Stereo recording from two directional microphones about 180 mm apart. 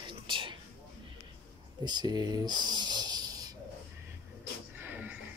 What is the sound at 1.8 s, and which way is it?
Speech, 25° right (ahead or behind).